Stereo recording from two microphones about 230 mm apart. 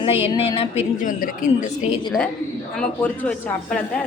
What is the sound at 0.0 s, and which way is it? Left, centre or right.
Speech, left.